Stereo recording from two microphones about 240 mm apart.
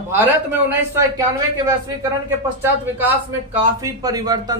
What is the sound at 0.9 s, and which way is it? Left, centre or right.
A man's voice, centre.